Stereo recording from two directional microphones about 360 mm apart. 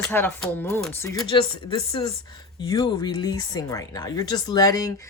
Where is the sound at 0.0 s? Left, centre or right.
Centre.